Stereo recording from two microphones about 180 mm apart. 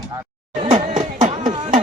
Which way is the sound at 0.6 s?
35° right (ahead or behind).